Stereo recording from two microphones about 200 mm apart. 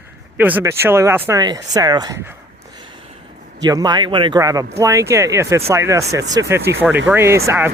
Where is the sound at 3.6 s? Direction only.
20° right (ahead or behind).